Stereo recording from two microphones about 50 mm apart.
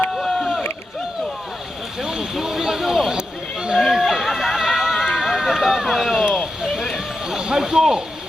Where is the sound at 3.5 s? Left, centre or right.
Centre.